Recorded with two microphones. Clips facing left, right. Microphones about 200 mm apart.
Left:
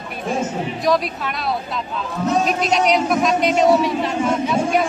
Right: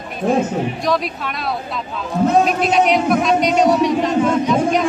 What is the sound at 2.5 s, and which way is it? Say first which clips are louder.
Speech: right 2 dB; centre (ahead or behind).